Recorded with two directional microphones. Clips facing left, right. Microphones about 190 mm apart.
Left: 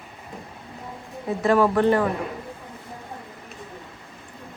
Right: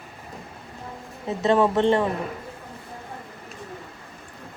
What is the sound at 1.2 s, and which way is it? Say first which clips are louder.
Speech: left 1 dB; 25° right (ahead or behind).